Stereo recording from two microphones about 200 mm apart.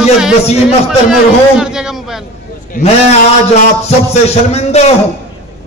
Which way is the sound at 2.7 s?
35° left (ahead or behind).